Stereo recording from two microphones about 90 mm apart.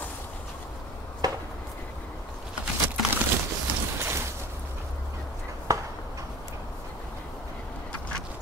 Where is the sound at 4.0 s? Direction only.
25° right (ahead or behind).